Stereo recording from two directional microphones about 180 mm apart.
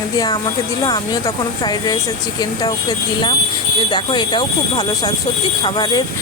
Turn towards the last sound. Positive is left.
turn(degrees=25)  # may be behind; listen again after turning